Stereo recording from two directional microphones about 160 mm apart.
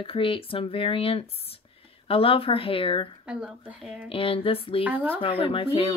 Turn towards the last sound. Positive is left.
turn(degrees=35)  # may be behind; listen again after turning